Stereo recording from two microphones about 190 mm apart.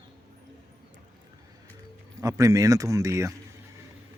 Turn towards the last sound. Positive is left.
turn(degrees=-15)  # may be behind; listen again after turning